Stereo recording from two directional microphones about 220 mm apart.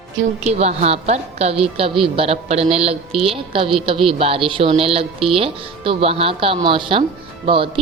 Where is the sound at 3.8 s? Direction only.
25° right (ahead or behind).